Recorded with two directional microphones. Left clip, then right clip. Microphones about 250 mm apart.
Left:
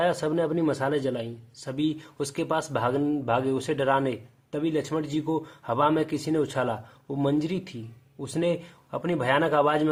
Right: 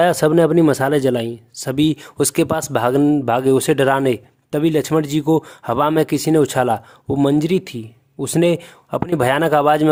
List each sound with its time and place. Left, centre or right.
0.0 s speech: right